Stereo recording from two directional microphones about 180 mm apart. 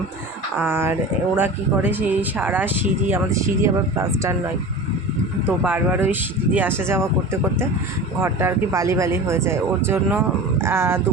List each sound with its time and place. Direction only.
0.5 s speech: 10° right (ahead or behind)
5.5 s speech: 10° right (ahead or behind)
8.2 s speech: 15° right (ahead or behind)